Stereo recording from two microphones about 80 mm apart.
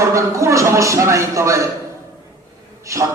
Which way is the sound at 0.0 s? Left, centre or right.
Right.